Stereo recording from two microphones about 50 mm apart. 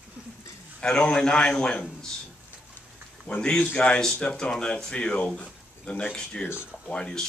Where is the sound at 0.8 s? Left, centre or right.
Centre.